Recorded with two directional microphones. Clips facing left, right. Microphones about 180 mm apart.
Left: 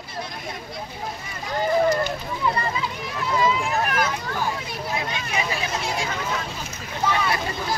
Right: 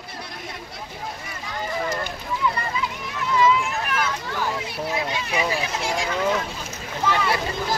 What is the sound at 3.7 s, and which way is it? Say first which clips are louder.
Vehicle: left 3 dB; 40° left (ahead or behind).